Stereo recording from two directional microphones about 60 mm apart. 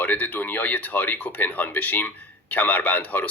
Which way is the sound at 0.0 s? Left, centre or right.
Left.